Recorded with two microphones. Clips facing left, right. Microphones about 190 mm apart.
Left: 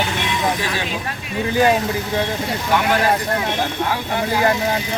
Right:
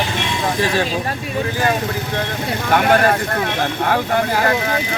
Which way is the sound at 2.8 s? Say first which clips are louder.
Right 5 dB; 55° right (ahead or behind).